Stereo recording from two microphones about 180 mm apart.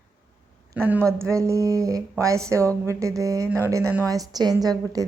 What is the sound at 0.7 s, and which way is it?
A woman's voice, 10° right (ahead or behind).